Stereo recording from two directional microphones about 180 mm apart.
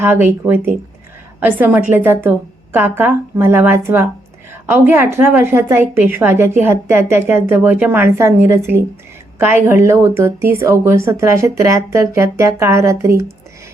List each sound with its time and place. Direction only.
0.0 s a woman's voice: 10° right (ahead or behind)